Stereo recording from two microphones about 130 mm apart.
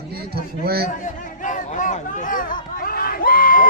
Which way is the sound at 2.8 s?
90° left.